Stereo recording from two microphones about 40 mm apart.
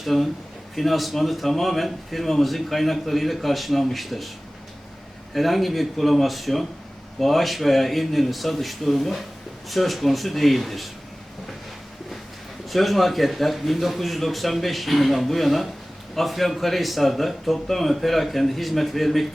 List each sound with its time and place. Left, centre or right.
0.0 s a man's voice: centre
5.3 s a man's voice: centre
12.6 s a man's voice: centre